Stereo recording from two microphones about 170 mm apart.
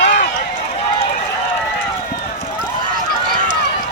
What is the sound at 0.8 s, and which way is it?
Run, 35° left (ahead or behind).